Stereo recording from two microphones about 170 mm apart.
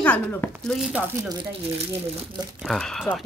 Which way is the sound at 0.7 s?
5° right (ahead or behind).